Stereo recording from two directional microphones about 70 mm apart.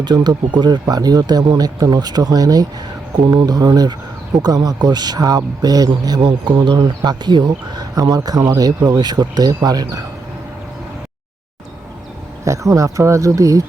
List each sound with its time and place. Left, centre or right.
0.0 s speech: right
12.5 s speech: right